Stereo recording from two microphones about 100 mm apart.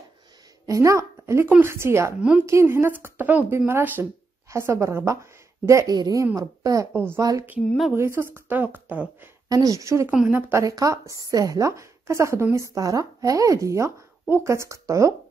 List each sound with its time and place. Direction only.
0.7 s a woman's voice: 30° right (ahead or behind)
7.6 s speech: centre (ahead or behind)
7.9 s speech: 25° right (ahead or behind)
9.5 s a woman's voice: 35° right (ahead or behind)
10.0 s a woman's voice: 15° right (ahead or behind)
10.5 s a woman's voice: 35° right (ahead or behind)